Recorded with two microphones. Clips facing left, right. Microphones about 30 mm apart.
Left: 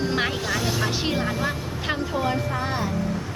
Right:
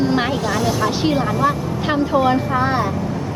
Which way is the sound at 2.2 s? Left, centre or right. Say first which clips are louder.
Right 8 dB; right.